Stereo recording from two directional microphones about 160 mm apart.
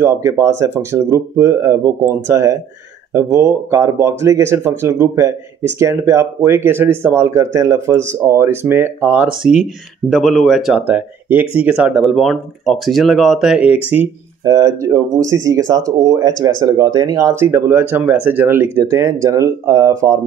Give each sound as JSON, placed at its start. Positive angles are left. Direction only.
{"t": 0.0, "sound": "speech", "side_deg": -20}
{"t": 14.4, "sound": "speech", "side_deg": -20}